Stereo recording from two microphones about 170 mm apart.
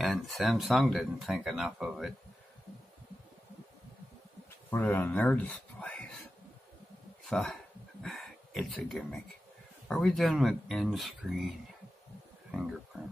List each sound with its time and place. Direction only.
0.0 s speech: centre (ahead or behind)
4.6 s speech: 10° left (ahead or behind)
7.2 s speech: centre (ahead or behind)
12.4 s a sound: centre (ahead or behind)